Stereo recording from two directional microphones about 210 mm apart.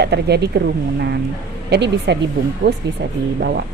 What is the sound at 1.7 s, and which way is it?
Speech, 55° right (ahead or behind).